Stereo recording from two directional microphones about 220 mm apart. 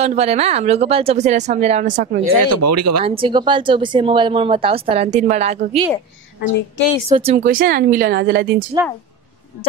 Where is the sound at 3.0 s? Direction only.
25° right (ahead or behind).